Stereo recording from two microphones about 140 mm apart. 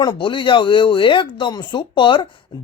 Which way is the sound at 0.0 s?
30° left (ahead or behind).